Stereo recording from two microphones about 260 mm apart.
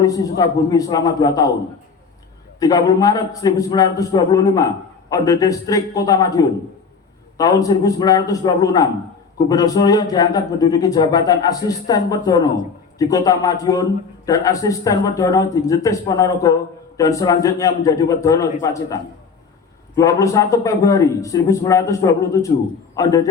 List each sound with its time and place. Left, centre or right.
0.0 s a man's voice: centre
2.6 s a man's voice: centre